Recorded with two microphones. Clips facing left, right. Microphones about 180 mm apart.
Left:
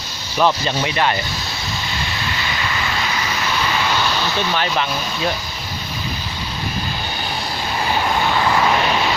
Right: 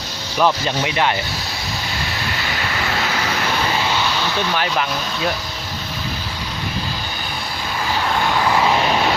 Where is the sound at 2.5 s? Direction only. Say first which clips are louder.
Right 2 dB; 60° right (ahead or behind).